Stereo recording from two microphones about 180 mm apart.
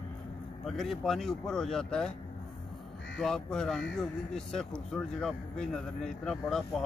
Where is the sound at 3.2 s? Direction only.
5° left (ahead or behind).